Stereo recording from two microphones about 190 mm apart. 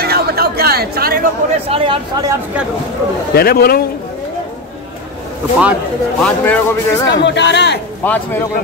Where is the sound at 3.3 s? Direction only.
55° left (ahead or behind).